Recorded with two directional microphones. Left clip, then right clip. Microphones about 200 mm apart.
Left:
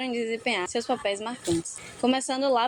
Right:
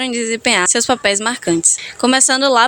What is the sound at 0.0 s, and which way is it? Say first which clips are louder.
A woman's voice: right 10 dB; 50° right (ahead or behind).